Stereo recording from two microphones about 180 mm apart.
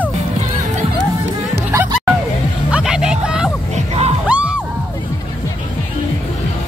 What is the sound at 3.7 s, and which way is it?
Music, 35° right (ahead or behind).